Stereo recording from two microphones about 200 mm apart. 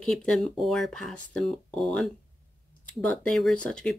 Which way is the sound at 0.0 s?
5° left (ahead or behind).